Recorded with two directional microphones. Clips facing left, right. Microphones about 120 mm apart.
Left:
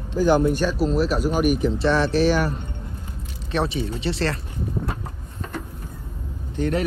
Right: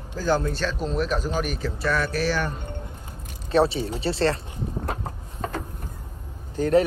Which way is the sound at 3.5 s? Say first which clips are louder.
Right 3 dB; 30° right (ahead or behind).